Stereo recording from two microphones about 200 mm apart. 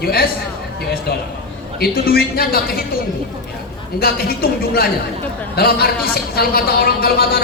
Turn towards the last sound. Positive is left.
turn(degrees=50)  # may be behind; listen again after turning